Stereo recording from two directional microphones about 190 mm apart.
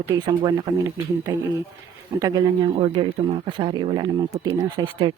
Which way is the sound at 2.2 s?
20° right (ahead or behind).